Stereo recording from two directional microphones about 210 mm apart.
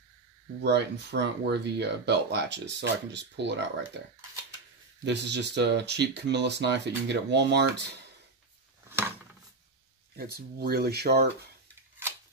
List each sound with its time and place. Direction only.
0.6 s speech: 55° right (ahead or behind)
5.0 s speech: 55° right (ahead or behind)
8.8 s a sound: 10° right (ahead or behind)
10.1 s speech: 45° right (ahead or behind)